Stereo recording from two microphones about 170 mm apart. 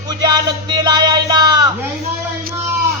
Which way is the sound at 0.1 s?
25° right (ahead or behind).